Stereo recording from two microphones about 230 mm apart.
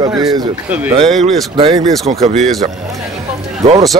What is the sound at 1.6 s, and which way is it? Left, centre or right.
Speech, right.